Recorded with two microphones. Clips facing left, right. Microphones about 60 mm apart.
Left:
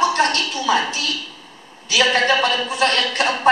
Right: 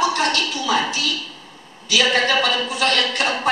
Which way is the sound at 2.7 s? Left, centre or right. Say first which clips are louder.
Left 1 dB; left.